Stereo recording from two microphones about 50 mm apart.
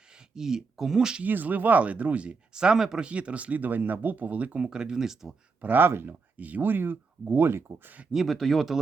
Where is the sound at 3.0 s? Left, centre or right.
Right.